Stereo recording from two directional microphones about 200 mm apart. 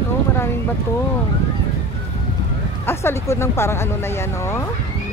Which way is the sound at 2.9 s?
10° left (ahead or behind).